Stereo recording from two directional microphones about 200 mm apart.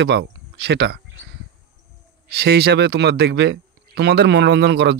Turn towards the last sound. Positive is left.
turn(degrees=-60)  # may be behind; listen again after turning